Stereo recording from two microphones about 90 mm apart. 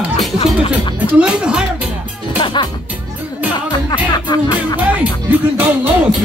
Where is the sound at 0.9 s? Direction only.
15° right (ahead or behind).